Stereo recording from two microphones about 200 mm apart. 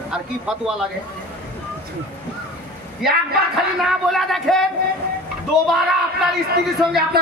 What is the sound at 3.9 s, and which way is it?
Speech, centre (ahead or behind).